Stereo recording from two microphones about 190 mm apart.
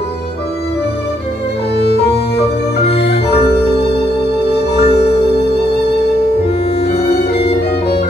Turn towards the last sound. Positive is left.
turn(degrees=60)  # may be behind; listen again after turning